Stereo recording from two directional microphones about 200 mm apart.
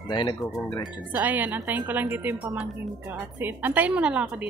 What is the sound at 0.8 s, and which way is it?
A woman's voice, 10° right (ahead or behind).